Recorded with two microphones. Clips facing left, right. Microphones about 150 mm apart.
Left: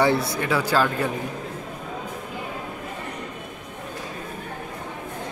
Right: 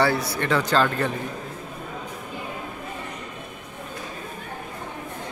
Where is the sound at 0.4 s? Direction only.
10° left (ahead or behind).